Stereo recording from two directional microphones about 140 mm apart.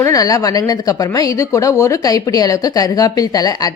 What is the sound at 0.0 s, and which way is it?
A woman's voice, 25° left (ahead or behind).